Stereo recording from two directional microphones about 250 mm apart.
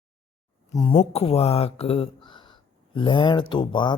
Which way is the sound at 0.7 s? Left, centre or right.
Centre.